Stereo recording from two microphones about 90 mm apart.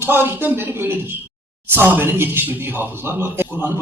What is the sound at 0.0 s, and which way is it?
Speech, 25° right (ahead or behind).